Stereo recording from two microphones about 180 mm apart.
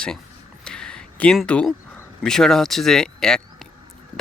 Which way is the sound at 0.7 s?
5° left (ahead or behind).